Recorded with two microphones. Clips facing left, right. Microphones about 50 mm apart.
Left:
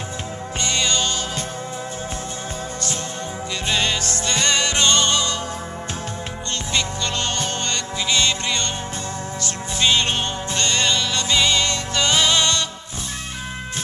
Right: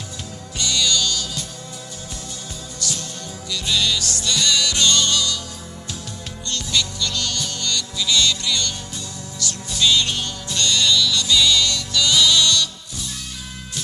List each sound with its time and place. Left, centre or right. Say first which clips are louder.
0.6 s music: right 1 dB; left
3.6 s music: even; left
6.7 s music: even; left